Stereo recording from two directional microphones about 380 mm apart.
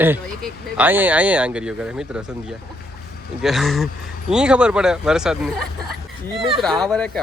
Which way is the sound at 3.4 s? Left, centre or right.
Centre.